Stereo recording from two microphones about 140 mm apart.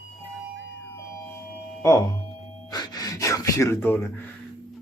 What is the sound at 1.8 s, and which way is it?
Speech, 25° left (ahead or behind).